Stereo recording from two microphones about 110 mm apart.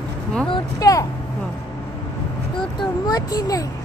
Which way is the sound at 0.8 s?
30° left (ahead or behind).